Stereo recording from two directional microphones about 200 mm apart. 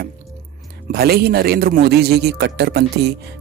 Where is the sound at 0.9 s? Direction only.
50° right (ahead or behind).